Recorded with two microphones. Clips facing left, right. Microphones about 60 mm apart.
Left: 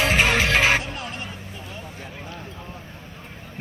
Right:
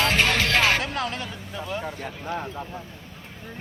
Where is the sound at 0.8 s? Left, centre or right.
Right.